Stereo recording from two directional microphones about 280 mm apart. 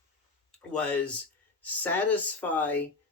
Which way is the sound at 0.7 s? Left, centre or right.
Centre.